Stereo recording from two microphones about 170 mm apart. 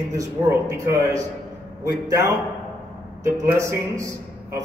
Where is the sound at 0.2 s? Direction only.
15° right (ahead or behind).